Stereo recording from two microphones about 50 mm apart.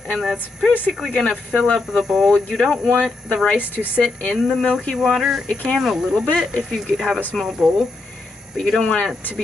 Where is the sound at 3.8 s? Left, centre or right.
Right.